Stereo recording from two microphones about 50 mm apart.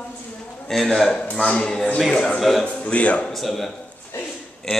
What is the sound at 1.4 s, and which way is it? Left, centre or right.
A man's voice, left.